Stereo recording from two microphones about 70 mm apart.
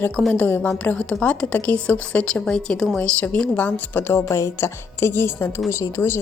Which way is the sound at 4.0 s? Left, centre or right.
Left.